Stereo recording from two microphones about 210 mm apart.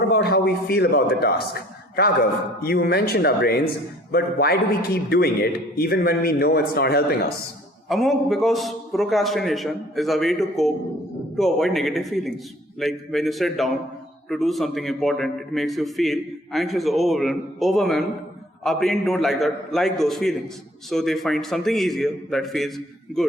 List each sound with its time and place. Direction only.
0.1 s a man's voice: 50° left (ahead or behind)
7.9 s a man's voice: centre (ahead or behind)